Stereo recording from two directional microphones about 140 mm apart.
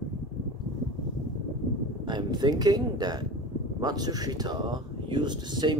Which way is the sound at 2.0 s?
30° right (ahead or behind).